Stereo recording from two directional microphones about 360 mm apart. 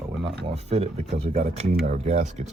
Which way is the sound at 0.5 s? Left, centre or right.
Centre.